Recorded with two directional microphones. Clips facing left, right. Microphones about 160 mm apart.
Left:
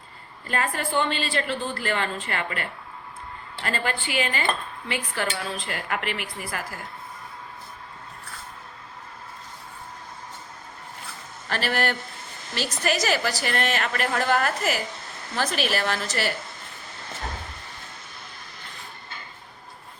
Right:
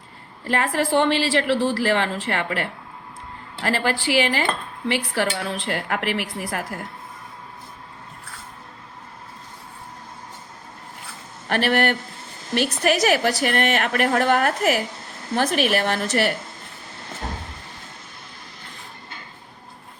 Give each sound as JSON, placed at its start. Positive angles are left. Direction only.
{"t": 0.4, "sound": "a woman's voice", "side_deg": -80}
{"t": 4.9, "sound": "speech", "side_deg": -75}
{"t": 11.4, "sound": "a woman's voice", "side_deg": -60}